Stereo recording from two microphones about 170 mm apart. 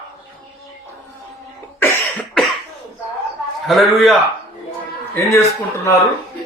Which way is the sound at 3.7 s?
Centre (ahead or behind).